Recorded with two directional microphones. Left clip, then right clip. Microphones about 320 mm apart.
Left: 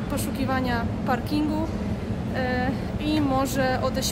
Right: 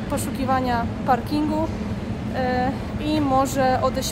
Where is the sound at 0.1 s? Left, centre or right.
Centre.